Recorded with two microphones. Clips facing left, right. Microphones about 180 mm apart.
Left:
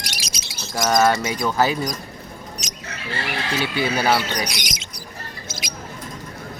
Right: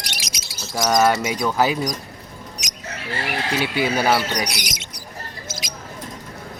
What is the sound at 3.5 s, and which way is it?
Speech, 10° right (ahead or behind).